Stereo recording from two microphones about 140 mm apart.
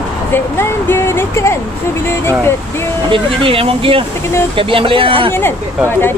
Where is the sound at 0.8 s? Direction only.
15° left (ahead or behind).